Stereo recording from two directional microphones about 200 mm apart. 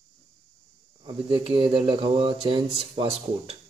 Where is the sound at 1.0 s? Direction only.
25° right (ahead or behind).